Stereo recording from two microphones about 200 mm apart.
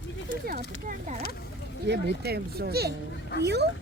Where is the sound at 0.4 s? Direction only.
45° right (ahead or behind).